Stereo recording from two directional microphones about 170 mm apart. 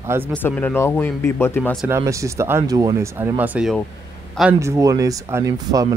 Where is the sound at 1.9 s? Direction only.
20° right (ahead or behind).